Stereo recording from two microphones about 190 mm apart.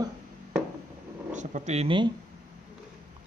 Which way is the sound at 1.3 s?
40° right (ahead or behind).